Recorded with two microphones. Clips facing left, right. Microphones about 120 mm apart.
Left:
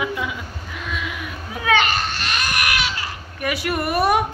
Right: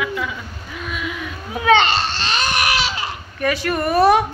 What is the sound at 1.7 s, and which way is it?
Baby cry, 25° right (ahead or behind).